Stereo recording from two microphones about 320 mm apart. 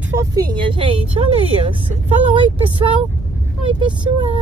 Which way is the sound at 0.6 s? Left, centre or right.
Centre.